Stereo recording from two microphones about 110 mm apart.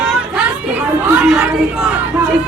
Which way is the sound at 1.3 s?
5° right (ahead or behind).